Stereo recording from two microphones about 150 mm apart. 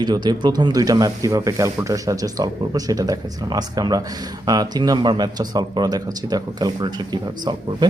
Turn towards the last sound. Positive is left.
turn(degrees=-30)  # may be behind; listen again after turning